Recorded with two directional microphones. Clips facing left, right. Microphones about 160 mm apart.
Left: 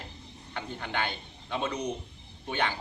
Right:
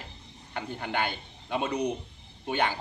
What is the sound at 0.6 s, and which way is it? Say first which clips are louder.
Speech: right 2 dB; 45° right (ahead or behind).